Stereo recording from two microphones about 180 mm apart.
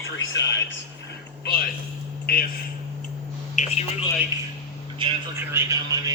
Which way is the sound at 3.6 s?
40° left (ahead or behind).